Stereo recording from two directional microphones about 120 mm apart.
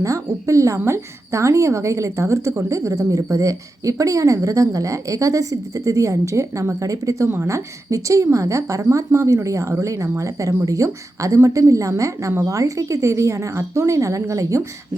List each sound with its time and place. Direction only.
0.0 s a woman's voice: 25° right (ahead or behind)